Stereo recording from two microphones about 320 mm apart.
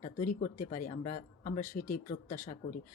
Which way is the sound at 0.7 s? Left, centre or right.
Left.